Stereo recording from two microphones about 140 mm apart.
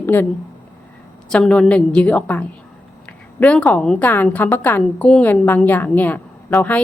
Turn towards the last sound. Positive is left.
turn(degrees=10)  # may be behind; listen again after turning